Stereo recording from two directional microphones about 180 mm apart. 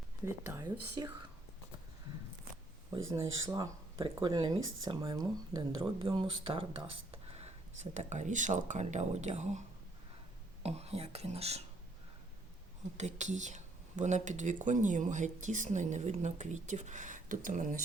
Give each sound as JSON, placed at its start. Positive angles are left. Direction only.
{"t": 0.3, "sound": "speech", "side_deg": -15}
{"t": 3.0, "sound": "speech", "side_deg": -15}
{"t": 13.0, "sound": "speech", "side_deg": -40}